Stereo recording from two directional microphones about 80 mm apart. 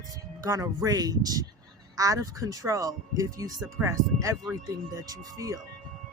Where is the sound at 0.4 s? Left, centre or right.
Right.